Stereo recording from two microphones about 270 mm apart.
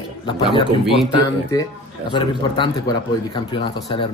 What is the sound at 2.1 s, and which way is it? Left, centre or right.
Speech, centre.